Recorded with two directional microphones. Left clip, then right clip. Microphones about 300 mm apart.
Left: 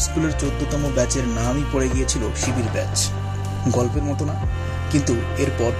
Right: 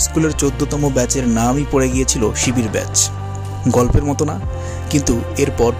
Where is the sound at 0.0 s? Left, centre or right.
Right.